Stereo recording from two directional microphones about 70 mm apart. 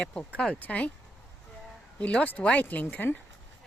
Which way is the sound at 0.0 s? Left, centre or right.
Centre.